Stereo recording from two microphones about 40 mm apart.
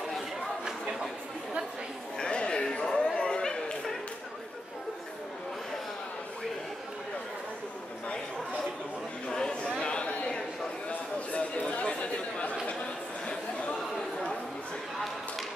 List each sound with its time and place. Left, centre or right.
0.7 s chatter: centre
2.1 s a sound: left
9.8 s chatter: left
10.9 s a sound: left
11.8 s chatter: left
13.9 s chatter: centre